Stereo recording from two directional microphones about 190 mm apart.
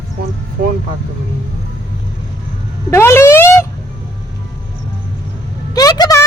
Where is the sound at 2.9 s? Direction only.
15° left (ahead or behind).